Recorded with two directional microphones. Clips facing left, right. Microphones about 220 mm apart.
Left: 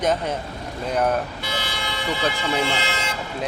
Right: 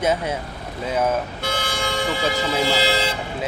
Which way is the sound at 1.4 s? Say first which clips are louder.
Right 4 dB; 50° right (ahead or behind).